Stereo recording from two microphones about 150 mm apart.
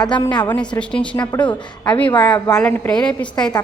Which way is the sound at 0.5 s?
5° left (ahead or behind).